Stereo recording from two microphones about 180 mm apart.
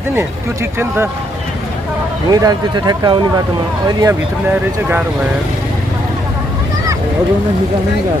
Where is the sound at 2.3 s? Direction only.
20° right (ahead or behind).